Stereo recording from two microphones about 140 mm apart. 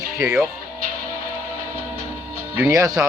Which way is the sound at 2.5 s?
20° right (ahead or behind).